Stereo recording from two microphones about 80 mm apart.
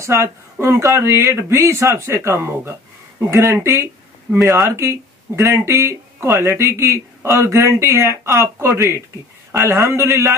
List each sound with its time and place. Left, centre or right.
0.0 s speech: right
3.6 s a sound: right
4.4 s speech: right
4.6 s speech: right